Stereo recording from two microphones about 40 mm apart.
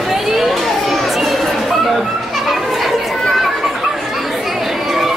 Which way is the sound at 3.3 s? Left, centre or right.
Centre.